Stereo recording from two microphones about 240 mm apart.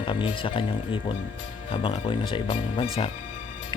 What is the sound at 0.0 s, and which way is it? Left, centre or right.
Speech, left.